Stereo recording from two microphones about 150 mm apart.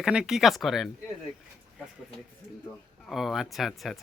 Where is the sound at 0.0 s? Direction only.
5° right (ahead or behind).